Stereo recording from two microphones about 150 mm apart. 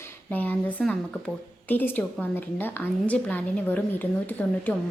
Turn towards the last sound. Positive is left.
turn(degrees=10)  # may be behind; listen again after turning